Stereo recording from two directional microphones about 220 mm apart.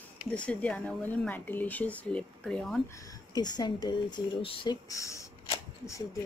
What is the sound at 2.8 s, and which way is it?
Speech, 15° left (ahead or behind).